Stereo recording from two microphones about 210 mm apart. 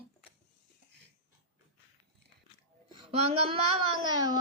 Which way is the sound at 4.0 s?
20° right (ahead or behind).